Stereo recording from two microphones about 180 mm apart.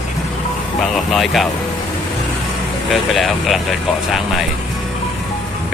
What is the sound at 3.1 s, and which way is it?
Speech, centre (ahead or behind).